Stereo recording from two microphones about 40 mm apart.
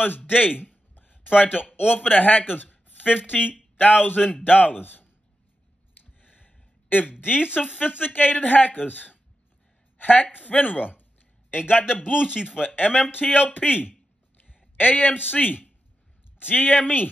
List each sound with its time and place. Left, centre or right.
0.3 s speech: left
0.9 s a sound: left
2.0 s speech: left
6.2 s a sound: left
7.6 s a woman's voice: left
11.8 s speech: centre
12.6 s speech: left
14.8 s speech: left